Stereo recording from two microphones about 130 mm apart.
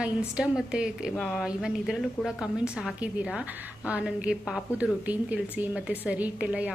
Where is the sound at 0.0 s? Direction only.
10° right (ahead or behind).